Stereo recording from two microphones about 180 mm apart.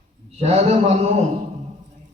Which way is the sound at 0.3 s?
35° right (ahead or behind).